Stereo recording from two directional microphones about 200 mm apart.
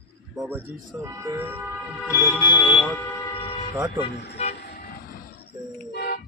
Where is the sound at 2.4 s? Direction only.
25° left (ahead or behind).